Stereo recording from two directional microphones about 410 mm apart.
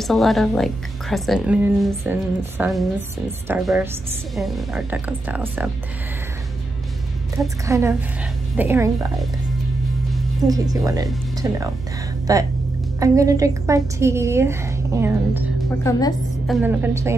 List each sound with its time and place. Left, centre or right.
0.0 s speech: centre
7.3 s a woman's voice: centre
15.8 s speech: centre